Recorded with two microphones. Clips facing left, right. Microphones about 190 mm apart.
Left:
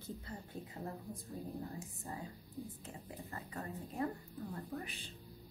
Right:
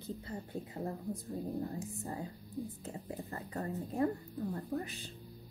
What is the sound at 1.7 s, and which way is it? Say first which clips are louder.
Speech: right 6 dB; 35° right (ahead or behind).